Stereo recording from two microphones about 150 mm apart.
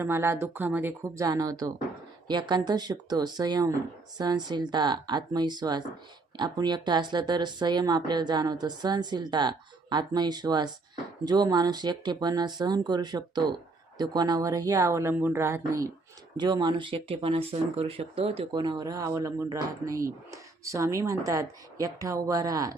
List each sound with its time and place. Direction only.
0.0 s speech: 20° right (ahead or behind)
16.4 s speech: 30° right (ahead or behind)